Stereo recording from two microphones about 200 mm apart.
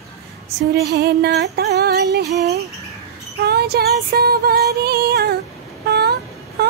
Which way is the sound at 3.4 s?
55° right (ahead or behind).